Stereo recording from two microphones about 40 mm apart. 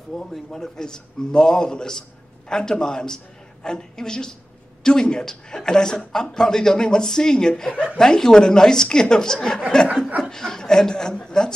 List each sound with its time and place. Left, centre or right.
0.5 s a man's voice: centre